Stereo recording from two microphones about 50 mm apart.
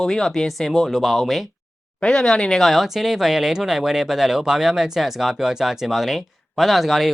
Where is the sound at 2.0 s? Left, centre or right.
Centre.